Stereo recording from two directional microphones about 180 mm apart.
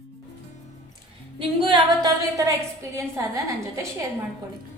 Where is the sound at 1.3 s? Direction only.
25° right (ahead or behind).